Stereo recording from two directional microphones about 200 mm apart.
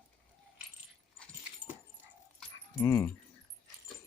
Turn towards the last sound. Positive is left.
turn(degrees=15)  # may be behind; listen again after turning